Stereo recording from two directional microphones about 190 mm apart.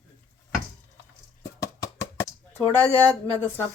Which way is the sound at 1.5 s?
15° left (ahead or behind).